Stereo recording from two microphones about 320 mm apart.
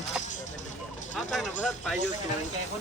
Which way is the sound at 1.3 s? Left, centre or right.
Centre.